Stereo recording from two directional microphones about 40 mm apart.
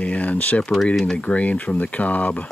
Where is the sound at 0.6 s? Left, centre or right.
Centre.